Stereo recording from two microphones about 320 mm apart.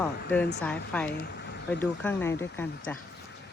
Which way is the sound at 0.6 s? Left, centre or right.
Centre.